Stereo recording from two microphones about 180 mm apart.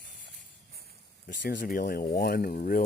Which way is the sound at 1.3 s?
50° left (ahead or behind).